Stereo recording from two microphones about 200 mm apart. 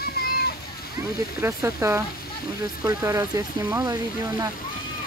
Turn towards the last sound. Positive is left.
turn(degrees=-15)  # may be behind; listen again after turning